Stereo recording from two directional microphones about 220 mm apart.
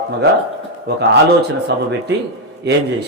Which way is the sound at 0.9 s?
45° right (ahead or behind).